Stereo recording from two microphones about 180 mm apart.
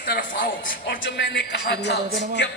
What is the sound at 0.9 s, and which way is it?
Speech, 85° left.